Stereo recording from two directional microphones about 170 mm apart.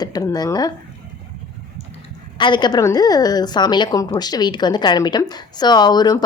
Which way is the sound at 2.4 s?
25° left (ahead or behind).